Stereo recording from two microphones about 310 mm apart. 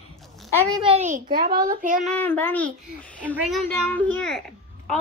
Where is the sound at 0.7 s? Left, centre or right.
Centre.